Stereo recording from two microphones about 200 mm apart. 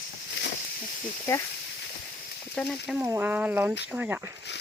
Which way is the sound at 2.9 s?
10° right (ahead or behind).